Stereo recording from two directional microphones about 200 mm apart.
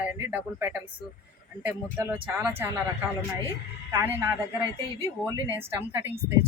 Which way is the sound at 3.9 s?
15° right (ahead or behind).